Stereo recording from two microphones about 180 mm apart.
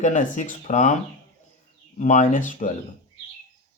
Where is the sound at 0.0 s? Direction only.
45° left (ahead or behind).